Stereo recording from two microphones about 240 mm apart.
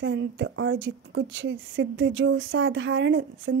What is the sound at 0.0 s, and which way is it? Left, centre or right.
A woman's voice, right.